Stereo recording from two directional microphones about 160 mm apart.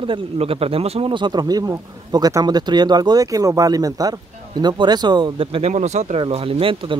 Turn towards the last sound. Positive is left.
turn(degrees=-35)  # may be behind; listen again after turning